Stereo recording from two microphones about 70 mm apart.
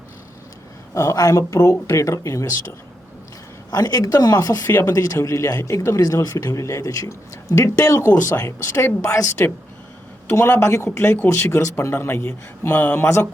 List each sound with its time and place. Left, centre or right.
0.9 s speech: left
3.7 s speech: left
4.4 s speech: left
10.6 s speech: left
10.9 s speech: left